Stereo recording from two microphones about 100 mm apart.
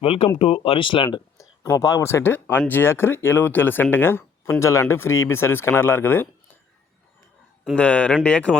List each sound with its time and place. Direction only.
0.0 s speech: 70° left (ahead or behind); by 1.2 s 55° left (ahead or behind)
1.4 s speech: 35° left (ahead or behind)
7.8 s speech: 15° left (ahead or behind)